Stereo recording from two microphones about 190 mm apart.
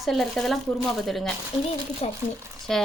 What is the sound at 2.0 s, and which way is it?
Speech, 35° left (ahead or behind).